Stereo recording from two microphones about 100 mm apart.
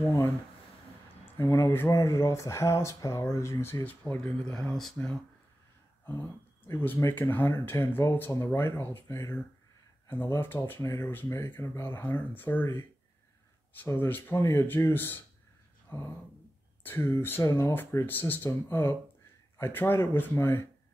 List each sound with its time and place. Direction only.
0.0 s speech: 25° left (ahead or behind)
3.8 s speech: 15° left (ahead or behind)
7.0 s speech: 20° left (ahead or behind)
13.9 s speech: 20° left (ahead or behind)
15.9 s a sound: 20° left (ahead or behind)
16.8 s speech: 25° left (ahead or behind)